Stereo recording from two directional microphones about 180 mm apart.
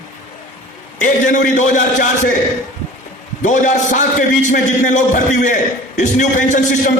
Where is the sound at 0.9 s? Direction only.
45° left (ahead or behind).